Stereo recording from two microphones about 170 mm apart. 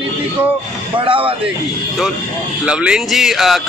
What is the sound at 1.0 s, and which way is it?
Speech, 30° right (ahead or behind).